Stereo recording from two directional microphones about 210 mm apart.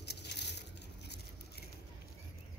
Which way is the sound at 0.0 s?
50° left (ahead or behind).